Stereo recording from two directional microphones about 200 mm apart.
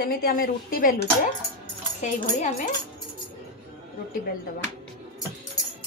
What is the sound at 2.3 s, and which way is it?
Speech, 40° left (ahead or behind).